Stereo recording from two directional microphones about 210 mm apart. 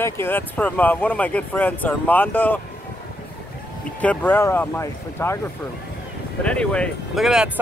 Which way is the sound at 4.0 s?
10° left (ahead or behind).